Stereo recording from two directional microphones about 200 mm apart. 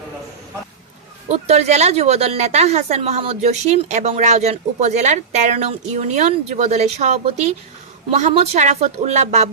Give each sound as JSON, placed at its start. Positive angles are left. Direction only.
{"t": 1.3, "sound": "speech", "side_deg": -35}